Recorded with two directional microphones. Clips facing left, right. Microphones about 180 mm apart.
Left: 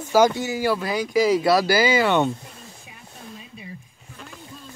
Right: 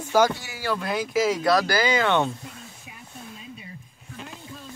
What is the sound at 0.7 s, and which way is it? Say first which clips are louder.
Speech: left 3 dB; centre (ahead or behind).